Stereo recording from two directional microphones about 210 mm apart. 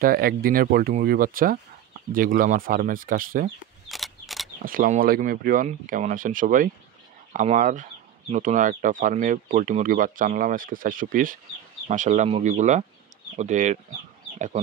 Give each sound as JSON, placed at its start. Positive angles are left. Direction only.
{"t": 0.0, "sound": "speech", "side_deg": -45}
{"t": 3.9, "sound": "a sound", "side_deg": 0}
{"t": 4.6, "sound": "speech", "side_deg": -40}